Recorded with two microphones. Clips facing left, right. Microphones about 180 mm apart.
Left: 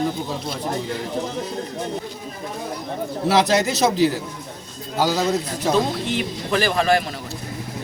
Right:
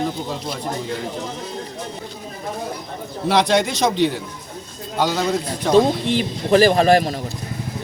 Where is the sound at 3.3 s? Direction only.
5° left (ahead or behind).